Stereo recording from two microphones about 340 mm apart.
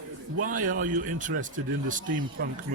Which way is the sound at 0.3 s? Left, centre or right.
Right.